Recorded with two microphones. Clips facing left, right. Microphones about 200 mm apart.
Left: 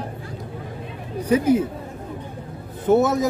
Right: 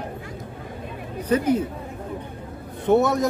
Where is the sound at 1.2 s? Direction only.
10° left (ahead or behind).